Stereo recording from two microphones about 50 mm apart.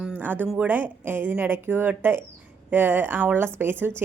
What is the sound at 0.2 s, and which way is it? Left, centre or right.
Music, right.